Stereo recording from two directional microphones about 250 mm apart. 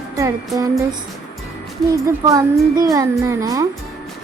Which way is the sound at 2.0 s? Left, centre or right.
Centre.